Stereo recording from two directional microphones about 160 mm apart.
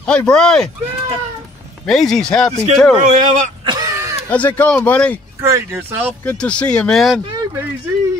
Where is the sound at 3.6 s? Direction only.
25° right (ahead or behind).